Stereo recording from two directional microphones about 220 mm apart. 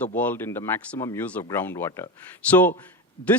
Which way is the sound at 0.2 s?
10° left (ahead or behind).